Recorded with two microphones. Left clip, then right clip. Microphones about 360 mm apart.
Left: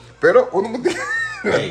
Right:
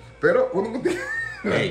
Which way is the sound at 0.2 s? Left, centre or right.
Centre.